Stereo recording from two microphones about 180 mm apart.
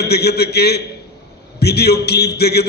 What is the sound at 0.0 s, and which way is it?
A man's voice, 65° left (ahead or behind).